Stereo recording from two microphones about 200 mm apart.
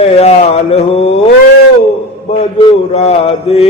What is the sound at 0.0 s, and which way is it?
Mantra, 30° left (ahead or behind).